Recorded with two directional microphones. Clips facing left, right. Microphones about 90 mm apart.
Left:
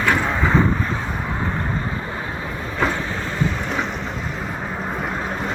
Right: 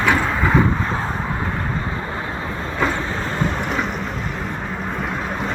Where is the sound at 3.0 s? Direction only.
20° right (ahead or behind).